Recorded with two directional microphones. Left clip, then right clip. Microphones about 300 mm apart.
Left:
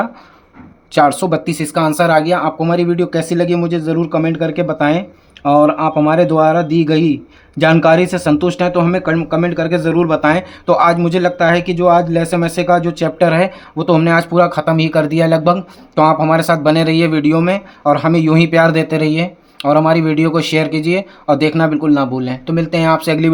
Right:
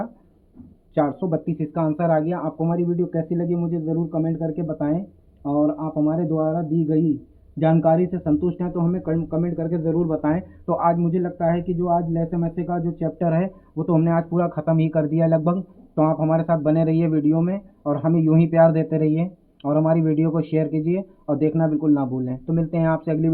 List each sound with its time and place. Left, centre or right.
0.9 s speech: left